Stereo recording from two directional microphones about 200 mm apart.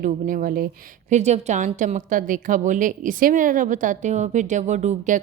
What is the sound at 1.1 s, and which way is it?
A woman's voice, 35° right (ahead or behind).